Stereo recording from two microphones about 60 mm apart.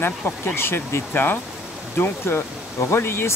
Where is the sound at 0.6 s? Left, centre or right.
Left.